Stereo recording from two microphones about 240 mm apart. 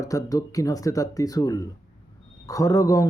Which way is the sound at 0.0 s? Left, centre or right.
Centre.